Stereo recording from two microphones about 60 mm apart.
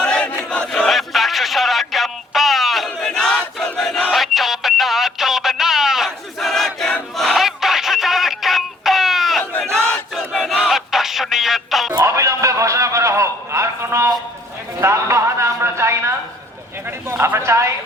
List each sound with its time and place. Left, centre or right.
0.0 s battle cry: centre
0.7 s a sound: centre
3.3 s battle cry: centre
4.1 s a sound: centre
6.1 s battle cry: centre
7.2 s music: centre
9.4 s crowd: left
10.2 s battle cry: centre
10.7 s music: centre
11.9 s a sound: right
14.8 s music: right
17.1 s a sound: right